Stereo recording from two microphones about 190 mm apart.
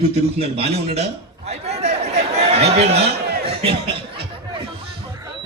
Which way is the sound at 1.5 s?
35° right (ahead or behind).